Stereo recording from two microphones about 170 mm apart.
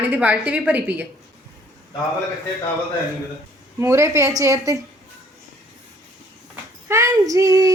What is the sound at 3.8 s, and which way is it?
A woman's voice, 15° right (ahead or behind).